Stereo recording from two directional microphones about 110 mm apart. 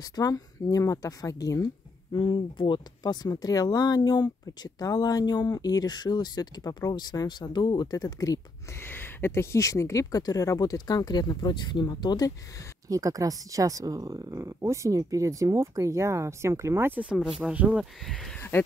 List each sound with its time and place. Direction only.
0.1 s speech: 35° left (ahead or behind)
2.1 s speech: 45° left (ahead or behind)
8.8 s speech: 20° left (ahead or behind); by 12.3 s 40° left (ahead or behind)
12.8 s speech: 30° right (ahead or behind)
17.0 s speech: 10° right (ahead or behind)
18.5 s speech: 20° left (ahead or behind)